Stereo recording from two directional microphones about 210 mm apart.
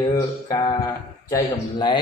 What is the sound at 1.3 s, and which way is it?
Speech, 20° left (ahead or behind).